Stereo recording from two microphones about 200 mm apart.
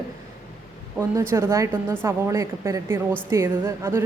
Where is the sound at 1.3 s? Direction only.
15° right (ahead or behind).